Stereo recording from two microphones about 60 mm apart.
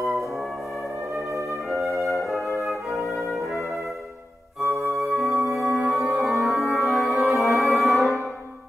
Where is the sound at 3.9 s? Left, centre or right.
Right.